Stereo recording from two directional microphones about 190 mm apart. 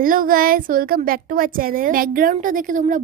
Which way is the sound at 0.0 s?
45° right (ahead or behind).